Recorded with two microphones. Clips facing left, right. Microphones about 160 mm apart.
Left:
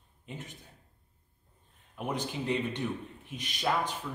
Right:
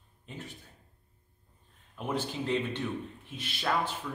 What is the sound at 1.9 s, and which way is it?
Speech, 15° left (ahead or behind).